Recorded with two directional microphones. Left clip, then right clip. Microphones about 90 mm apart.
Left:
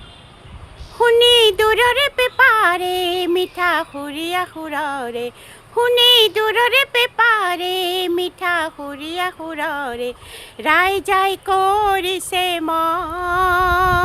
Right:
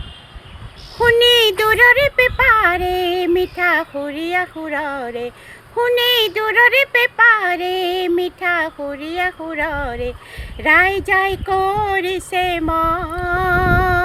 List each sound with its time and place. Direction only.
0.9 s speech: 35° left (ahead or behind)